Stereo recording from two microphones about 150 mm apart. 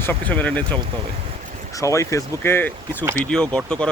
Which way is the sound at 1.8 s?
20° left (ahead or behind).